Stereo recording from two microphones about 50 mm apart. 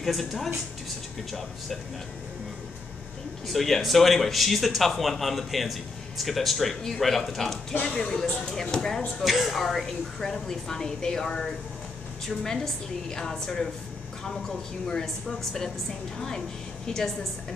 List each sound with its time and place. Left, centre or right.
0.0 s speech: centre
3.4 s a woman's voice: centre
9.2 s a woman's voice: centre
14.9 s a woman's voice: centre